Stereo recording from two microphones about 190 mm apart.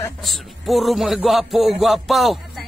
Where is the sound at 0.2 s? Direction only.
Centre (ahead or behind).